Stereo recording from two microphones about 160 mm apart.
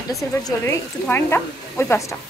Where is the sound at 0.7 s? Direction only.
15° left (ahead or behind).